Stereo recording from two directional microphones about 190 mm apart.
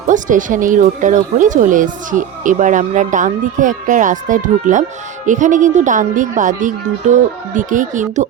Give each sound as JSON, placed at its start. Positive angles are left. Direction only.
{"t": 0.1, "sound": "speech", "side_deg": -45}